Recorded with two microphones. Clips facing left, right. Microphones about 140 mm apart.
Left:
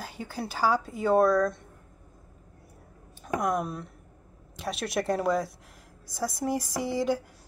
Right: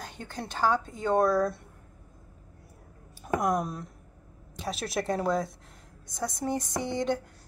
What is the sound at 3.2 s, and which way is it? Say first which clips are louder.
A woman's voice: right 1 dB; centre (ahead or behind).